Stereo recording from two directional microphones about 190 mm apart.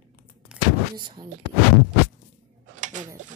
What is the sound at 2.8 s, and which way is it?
Mechanisms, 40° right (ahead or behind).